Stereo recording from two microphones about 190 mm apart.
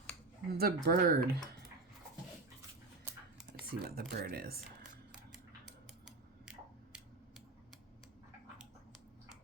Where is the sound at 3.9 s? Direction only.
55° right (ahead or behind).